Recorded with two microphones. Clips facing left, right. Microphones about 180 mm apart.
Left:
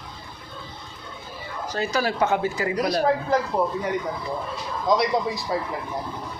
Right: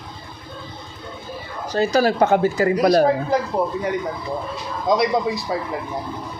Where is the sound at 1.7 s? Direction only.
35° right (ahead or behind).